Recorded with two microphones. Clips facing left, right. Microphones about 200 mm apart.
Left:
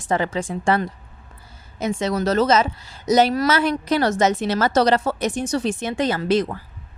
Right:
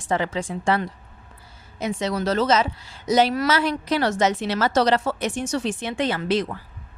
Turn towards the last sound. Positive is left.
turn(degrees=45)  # may be behind; listen again after turning